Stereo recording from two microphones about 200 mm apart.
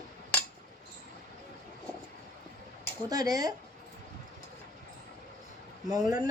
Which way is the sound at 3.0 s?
20° right (ahead or behind).